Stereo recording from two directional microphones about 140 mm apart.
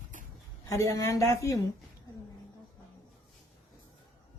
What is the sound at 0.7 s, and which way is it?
Speech, 25° left (ahead or behind).